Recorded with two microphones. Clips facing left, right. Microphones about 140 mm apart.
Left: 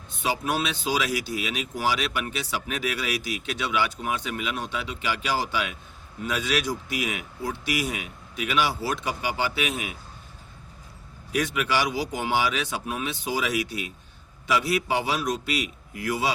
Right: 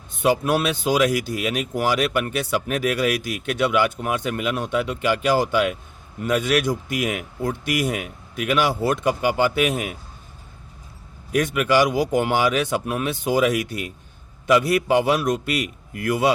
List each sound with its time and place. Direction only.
0.1 s speech: 50° right (ahead or behind)
11.3 s speech: 50° right (ahead or behind)